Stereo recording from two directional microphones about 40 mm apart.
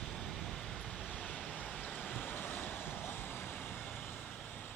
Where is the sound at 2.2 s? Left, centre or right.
Left.